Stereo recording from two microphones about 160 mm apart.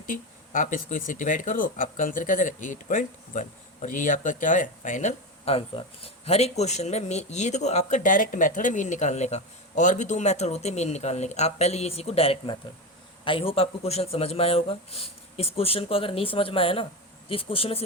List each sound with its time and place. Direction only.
0.0 s speech: 55° left (ahead or behind); by 17.8 s 35° left (ahead or behind)